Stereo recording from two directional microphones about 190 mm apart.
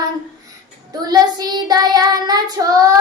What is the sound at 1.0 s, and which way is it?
Child singing, 20° right (ahead or behind).